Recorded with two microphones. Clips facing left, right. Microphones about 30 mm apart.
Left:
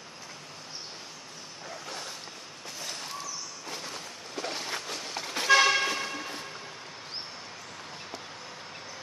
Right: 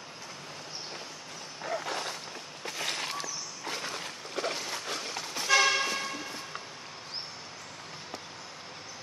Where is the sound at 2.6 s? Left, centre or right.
Right.